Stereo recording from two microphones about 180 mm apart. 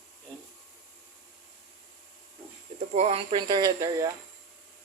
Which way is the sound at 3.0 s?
35° right (ahead or behind).